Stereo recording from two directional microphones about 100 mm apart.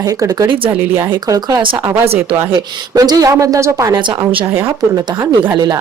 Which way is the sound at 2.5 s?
35° right (ahead or behind).